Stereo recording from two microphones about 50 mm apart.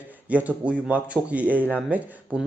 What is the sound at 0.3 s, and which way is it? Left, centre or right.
Speech, right.